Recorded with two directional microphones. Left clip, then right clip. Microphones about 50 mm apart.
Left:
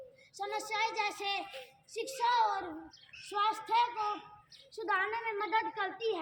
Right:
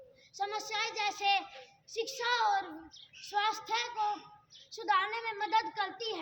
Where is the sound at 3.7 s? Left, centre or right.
Right.